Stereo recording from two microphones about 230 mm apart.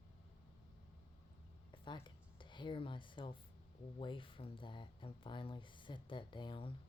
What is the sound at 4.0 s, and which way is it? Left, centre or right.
Speech, left.